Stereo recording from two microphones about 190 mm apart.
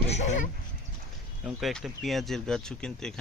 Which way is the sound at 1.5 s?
Centre (ahead or behind).